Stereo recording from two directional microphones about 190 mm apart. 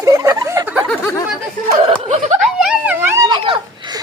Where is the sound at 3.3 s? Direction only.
25° right (ahead or behind).